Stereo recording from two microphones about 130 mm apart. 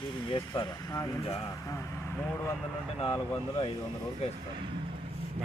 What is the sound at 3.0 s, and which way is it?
Speech, 45° left (ahead or behind).